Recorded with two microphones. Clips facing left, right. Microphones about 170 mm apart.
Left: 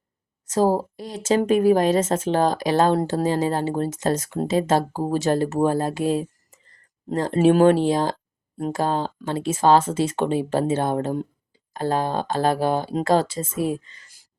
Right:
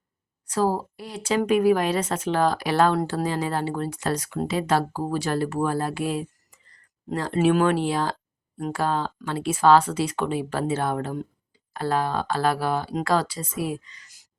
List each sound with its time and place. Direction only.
0.5 s speech: 25° left (ahead or behind)
0.8 s a woman's voice: 40° left (ahead or behind)
2.0 s speech: 25° left (ahead or behind)
2.3 s speech: 40° left (ahead or behind)
3.2 s speech: 40° left (ahead or behind)
3.9 s speech: 25° left (ahead or behind)
4.2 s a woman's voice: 40° left (ahead or behind)
4.7 s speech: 25° left (ahead or behind)
6.1 s a sound: 35° left (ahead or behind)
7.1 s a woman's voice: 45° left (ahead or behind)
9.3 s speech: 25° left (ahead or behind)
13.8 s speech: 50° left (ahead or behind)